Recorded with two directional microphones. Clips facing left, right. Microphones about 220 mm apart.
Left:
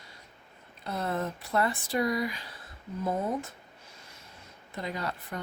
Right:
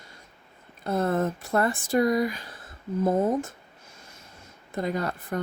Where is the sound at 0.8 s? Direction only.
50° right (ahead or behind).